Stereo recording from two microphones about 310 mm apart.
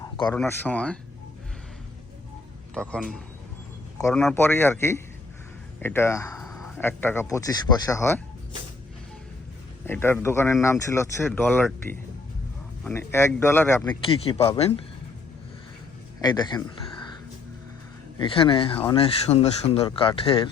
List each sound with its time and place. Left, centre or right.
0.0 s a sound: centre
0.3 s speech: centre
2.7 s speech: centre
9.8 s speech: centre
14.1 s speech: centre
16.2 s speech: centre
18.2 s speech: centre